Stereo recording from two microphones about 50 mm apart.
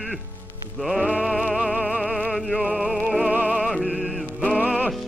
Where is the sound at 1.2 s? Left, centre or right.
Centre.